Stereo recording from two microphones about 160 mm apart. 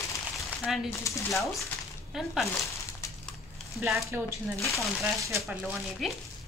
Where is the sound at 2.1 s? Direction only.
Centre (ahead or behind).